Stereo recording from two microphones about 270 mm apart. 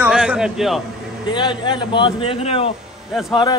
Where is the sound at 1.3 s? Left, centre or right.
Centre.